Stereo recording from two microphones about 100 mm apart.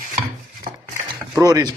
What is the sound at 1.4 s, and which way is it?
Speech, 40° right (ahead or behind).